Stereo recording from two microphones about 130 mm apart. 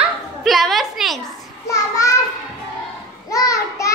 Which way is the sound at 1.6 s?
25° left (ahead or behind).